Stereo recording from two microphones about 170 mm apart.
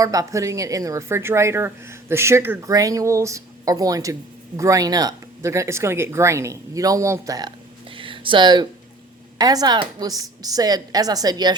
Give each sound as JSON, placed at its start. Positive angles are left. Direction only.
{"t": 0.0, "sound": "a woman's voice", "side_deg": -20}